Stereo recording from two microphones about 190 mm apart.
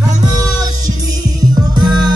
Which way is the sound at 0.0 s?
20° right (ahead or behind).